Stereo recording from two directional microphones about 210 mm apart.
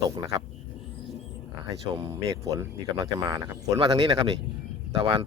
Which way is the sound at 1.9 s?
15° right (ahead or behind).